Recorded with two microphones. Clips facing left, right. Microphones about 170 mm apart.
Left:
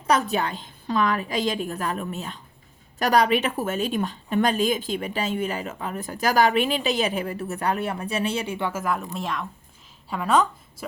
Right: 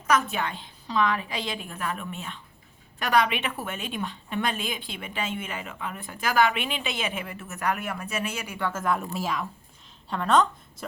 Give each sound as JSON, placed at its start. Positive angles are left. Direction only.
{"t": 0.1, "sound": "a woman's voice", "side_deg": 35}
{"t": 8.7, "sound": "a woman's voice", "side_deg": 0}